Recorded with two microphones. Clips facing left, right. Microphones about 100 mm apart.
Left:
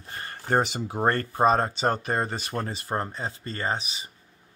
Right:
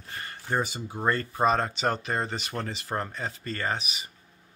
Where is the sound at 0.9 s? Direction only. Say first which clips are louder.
Left 3 dB; 55° left (ahead or behind).